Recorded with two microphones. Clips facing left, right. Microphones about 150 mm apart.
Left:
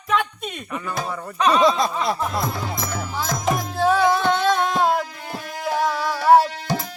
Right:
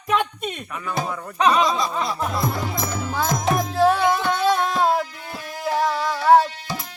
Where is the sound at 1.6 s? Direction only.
55° left (ahead or behind).